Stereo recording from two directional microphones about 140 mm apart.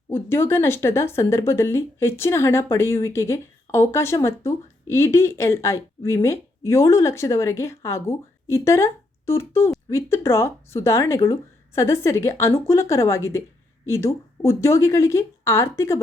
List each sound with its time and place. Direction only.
0.1 s speech: 15° left (ahead or behind)